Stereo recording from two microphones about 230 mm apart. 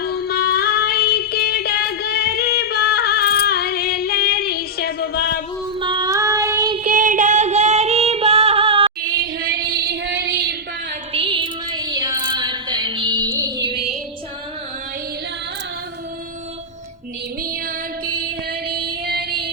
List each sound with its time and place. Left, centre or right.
0.0 s female singing: left
5.8 s child singing: centre
6.7 s music: right
9.1 s female singing: right
11.1 s music: right
18.0 s music: right
18.7 s child singing: right